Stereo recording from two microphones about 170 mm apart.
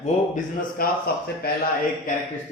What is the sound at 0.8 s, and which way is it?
Speech, 60° left (ahead or behind).